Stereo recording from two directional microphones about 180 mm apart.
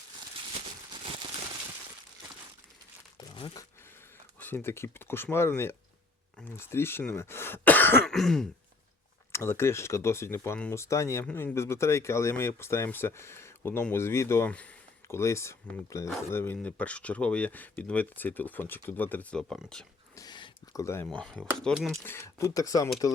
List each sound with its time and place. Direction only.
3.2 s crumpling: 25° left (ahead or behind)
4.4 s speech: 10° left (ahead or behind)
9.3 s speech: 15° left (ahead or behind)
20.1 s speech: 25° left (ahead or behind)